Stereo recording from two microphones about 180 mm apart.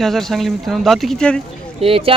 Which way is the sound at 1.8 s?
30° right (ahead or behind).